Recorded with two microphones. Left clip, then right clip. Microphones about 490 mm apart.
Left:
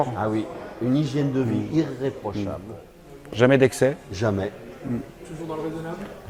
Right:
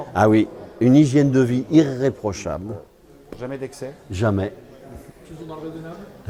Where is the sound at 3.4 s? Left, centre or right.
Left.